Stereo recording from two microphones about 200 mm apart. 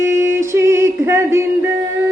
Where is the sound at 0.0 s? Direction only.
15° right (ahead or behind).